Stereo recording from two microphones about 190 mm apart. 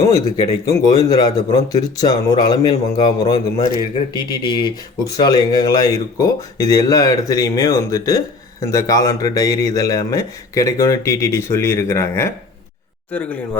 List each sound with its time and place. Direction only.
0.0 s speech: 20° left (ahead or behind)